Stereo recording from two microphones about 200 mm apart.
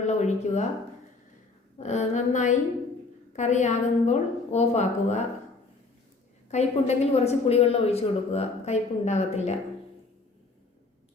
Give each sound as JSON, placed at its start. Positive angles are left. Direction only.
{"t": 0.0, "sound": "a sound", "side_deg": 35}
{"t": 1.8, "sound": "a woman's voice", "side_deg": 35}
{"t": 6.5, "sound": "a woman's voice", "side_deg": 35}